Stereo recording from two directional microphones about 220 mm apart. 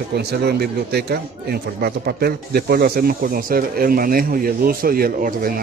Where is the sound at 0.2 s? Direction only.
45° right (ahead or behind).